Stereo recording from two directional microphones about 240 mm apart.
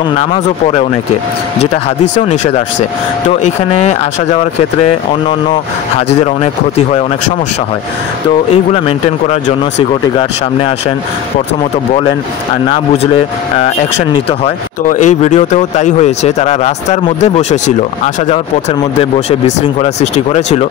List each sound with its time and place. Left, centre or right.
0.3 s speech: left
3.3 s speech: left
5.9 s speech: left
8.7 s speech: left
12.7 s speech: left